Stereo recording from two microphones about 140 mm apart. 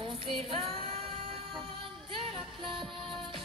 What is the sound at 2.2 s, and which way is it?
Music, 40° right (ahead or behind).